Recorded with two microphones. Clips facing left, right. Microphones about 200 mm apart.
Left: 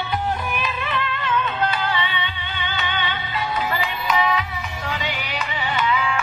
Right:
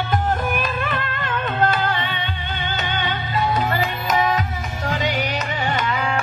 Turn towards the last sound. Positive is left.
turn(degrees=-45)  # may be behind; listen again after turning